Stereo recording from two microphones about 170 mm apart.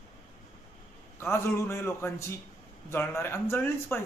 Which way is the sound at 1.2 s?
15° left (ahead or behind).